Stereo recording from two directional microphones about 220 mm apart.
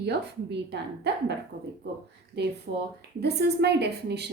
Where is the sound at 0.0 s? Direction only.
50° right (ahead or behind).